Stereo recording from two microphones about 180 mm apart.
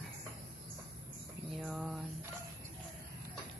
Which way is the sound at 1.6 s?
5° right (ahead or behind).